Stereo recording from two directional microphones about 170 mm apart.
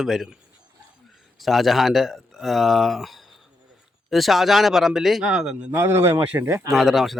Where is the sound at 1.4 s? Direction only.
Centre (ahead or behind).